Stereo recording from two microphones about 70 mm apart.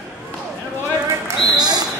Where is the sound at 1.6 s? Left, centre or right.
Right.